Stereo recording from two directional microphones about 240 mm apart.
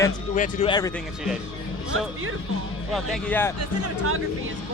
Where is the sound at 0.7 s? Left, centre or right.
Centre.